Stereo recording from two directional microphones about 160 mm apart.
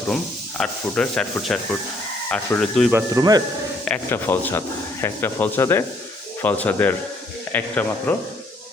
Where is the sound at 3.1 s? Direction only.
25° right (ahead or behind).